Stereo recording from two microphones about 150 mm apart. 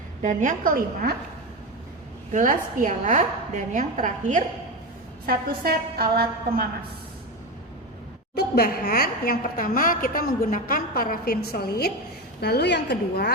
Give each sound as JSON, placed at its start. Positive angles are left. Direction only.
{"t": 0.2, "sound": "a woman's voice", "side_deg": -55}
{"t": 2.3, "sound": "a woman's voice", "side_deg": -60}
{"t": 5.2, "sound": "a woman's voice", "side_deg": -85}
{"t": 8.4, "sound": "a woman's voice", "side_deg": 90}